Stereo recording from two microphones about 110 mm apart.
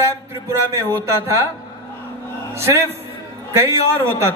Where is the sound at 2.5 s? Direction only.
25° right (ahead or behind).